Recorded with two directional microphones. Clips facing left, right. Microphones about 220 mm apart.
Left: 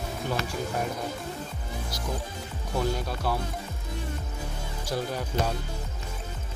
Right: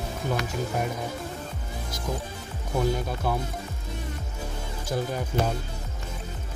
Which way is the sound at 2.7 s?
20° right (ahead or behind).